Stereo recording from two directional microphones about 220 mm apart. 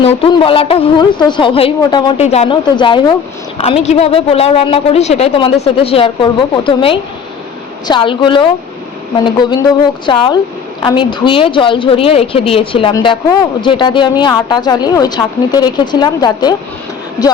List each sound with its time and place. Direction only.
0.0 s a woman's voice: 25° left (ahead or behind)
10.1 s a woman's voice: 20° left (ahead or behind)